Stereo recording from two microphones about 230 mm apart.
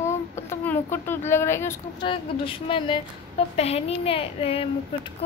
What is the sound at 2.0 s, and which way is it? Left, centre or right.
A woman's voice, left.